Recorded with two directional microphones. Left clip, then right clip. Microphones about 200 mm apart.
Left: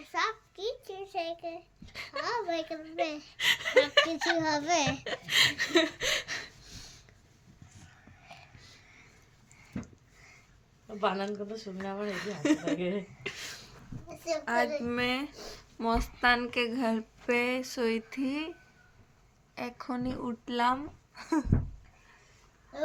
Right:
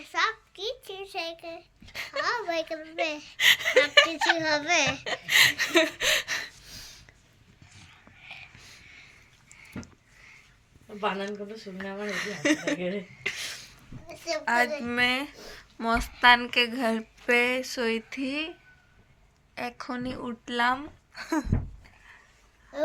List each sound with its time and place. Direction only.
0.0 s child singing: 10° left (ahead or behind)
1.9 s a sound: 20° right (ahead or behind)
2.2 s speech: centre (ahead or behind)
3.3 s speech: 15° right (ahead or behind)
4.4 s speech: 10° left (ahead or behind)
5.0 s a sound: 10° right (ahead or behind)
8.5 s a sound: 15° right (ahead or behind)
10.8 s speech: 10° right (ahead or behind)
19.5 s speech: centre (ahead or behind)